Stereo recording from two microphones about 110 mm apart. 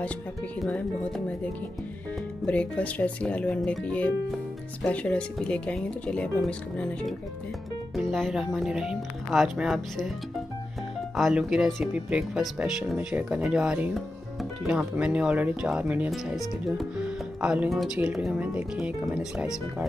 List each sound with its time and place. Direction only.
0.7 s speech: 10° left (ahead or behind)
2.4 s speech: 10° left (ahead or behind)
11.1 s speech: 5° right (ahead or behind)
13.9 s speech: centre (ahead or behind)